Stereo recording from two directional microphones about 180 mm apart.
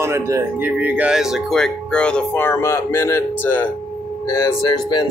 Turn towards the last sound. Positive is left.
turn(degrees=20)  # may be behind; listen again after turning